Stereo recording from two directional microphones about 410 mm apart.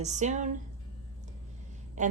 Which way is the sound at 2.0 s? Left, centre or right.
Centre.